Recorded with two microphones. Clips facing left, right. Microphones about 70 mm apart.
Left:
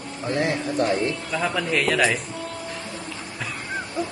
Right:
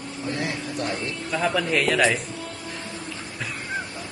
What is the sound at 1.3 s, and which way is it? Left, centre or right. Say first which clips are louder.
Speech: right 1 dB; centre.